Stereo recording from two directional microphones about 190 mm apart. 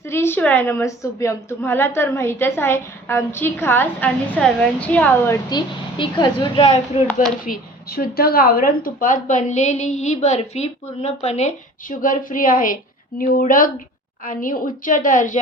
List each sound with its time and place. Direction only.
0.1 s a woman's voice: 10° left (ahead or behind)
7.1 s speech: 5° left (ahead or behind)
7.4 s a woman's voice: 50° left (ahead or behind)